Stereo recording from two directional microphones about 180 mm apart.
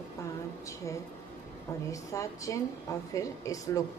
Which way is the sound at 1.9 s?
15° left (ahead or behind).